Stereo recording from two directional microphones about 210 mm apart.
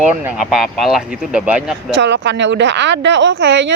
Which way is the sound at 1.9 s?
55° right (ahead or behind).